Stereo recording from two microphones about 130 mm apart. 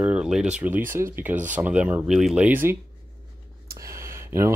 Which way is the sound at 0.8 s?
90° right.